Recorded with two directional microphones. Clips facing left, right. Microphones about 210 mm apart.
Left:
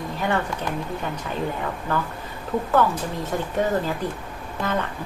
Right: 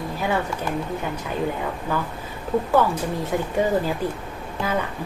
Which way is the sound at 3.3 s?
10° right (ahead or behind).